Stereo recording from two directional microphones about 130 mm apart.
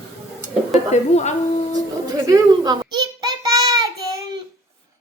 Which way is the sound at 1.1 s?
60° left (ahead or behind).